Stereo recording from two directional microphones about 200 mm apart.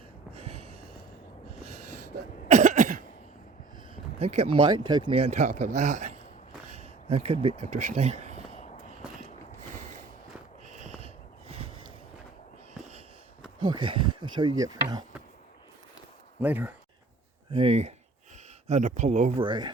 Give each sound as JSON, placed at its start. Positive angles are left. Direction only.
{"t": 0.3, "sound": "a sound", "side_deg": -30}
{"t": 2.5, "sound": "cough", "side_deg": -35}
{"t": 3.9, "sound": "speech", "side_deg": -30}
{"t": 6.7, "sound": "a sound", "side_deg": -30}
{"t": 7.4, "sound": "speech", "side_deg": -35}
{"t": 8.5, "sound": "walk", "side_deg": 35}
{"t": 10.7, "sound": "a sound", "side_deg": -35}
{"t": 13.6, "sound": "speech", "side_deg": -25}
{"t": 16.4, "sound": "speech", "side_deg": -10}
{"t": 17.5, "sound": "speech", "side_deg": -30}
{"t": 19.4, "sound": "speech", "side_deg": -20}